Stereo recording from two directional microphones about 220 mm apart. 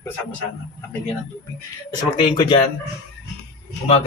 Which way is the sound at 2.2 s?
20° left (ahead or behind).